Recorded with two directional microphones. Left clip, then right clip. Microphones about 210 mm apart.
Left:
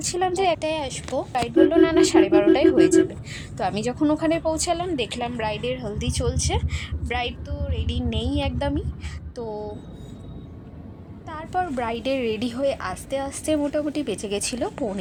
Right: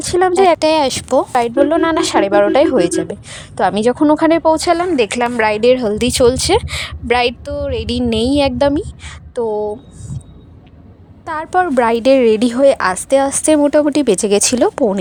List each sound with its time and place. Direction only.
0.0 s a woman's voice: 35° right (ahead or behind)
5.6 s a woman's voice: 50° right (ahead or behind)
11.3 s a woman's voice: 40° right (ahead or behind)